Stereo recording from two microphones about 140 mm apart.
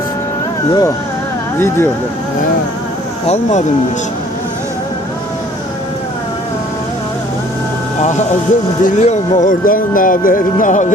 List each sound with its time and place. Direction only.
0.7 s speech: 25° left (ahead or behind)
3.2 s speech: 50° left (ahead or behind)
8.8 s speech: 60° left (ahead or behind)